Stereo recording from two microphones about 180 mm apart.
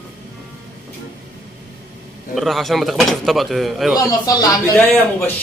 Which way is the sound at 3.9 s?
20° left (ahead or behind).